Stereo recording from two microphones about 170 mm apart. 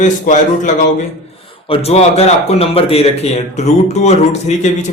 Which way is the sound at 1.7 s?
35° left (ahead or behind).